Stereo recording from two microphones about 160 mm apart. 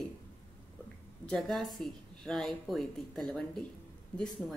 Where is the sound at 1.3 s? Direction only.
Centre (ahead or behind).